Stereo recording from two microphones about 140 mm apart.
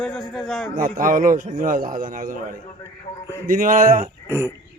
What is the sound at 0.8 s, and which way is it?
A man's voice, 80° right.